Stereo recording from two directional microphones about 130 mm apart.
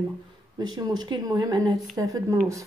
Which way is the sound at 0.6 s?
35° right (ahead or behind).